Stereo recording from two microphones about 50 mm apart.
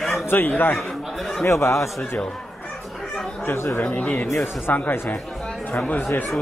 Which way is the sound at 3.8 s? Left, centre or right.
Left.